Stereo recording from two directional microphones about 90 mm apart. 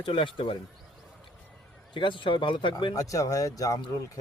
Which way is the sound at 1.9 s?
65° left (ahead or behind).